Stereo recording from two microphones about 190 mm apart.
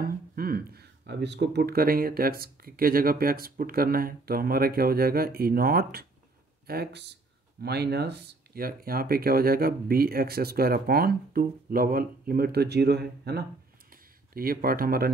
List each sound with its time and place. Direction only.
0.0 s speech: 50° right (ahead or behind)